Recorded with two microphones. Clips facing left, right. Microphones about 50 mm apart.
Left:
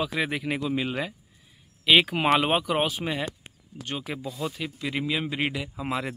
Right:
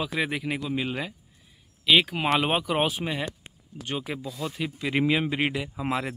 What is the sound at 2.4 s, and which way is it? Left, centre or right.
Speech, centre.